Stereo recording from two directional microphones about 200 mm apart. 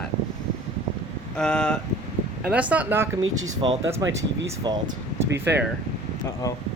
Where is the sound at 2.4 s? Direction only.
5° right (ahead or behind).